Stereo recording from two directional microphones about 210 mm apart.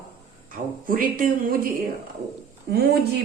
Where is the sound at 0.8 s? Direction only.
40° right (ahead or behind).